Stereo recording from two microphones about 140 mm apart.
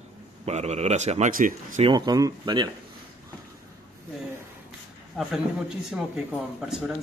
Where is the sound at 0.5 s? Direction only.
50° right (ahead or behind).